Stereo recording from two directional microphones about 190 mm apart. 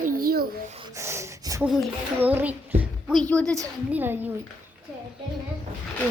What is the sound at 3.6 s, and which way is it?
Speech, 10° right (ahead or behind).